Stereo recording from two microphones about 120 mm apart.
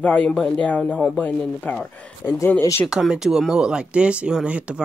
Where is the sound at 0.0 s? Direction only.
10° left (ahead or behind).